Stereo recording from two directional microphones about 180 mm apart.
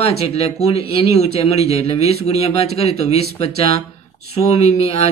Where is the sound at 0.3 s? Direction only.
35° left (ahead or behind).